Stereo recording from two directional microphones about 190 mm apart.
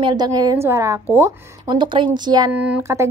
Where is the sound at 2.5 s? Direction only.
10° right (ahead or behind).